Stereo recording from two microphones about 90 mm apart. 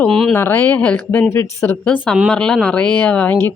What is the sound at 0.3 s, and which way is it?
Speech, 25° left (ahead or behind).